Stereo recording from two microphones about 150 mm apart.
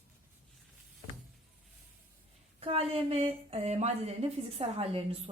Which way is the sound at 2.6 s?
40° right (ahead or behind).